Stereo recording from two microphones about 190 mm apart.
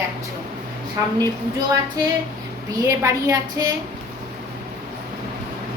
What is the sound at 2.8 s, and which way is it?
Speech, 15° right (ahead or behind).